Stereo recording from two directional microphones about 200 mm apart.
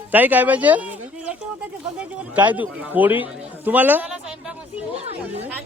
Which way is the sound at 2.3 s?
10° right (ahead or behind).